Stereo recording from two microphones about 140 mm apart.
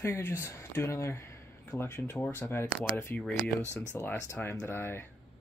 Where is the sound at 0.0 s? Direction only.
15° left (ahead or behind).